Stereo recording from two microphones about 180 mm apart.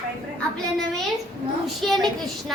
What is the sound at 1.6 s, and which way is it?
Speech, centre (ahead or behind).